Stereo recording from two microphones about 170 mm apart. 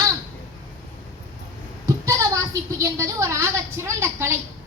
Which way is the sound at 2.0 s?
20° right (ahead or behind).